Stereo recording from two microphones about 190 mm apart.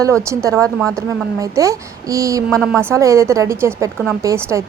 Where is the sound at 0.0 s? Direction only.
15° right (ahead or behind).